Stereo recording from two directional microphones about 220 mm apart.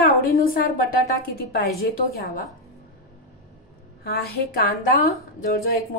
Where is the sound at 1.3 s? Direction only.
45° left (ahead or behind).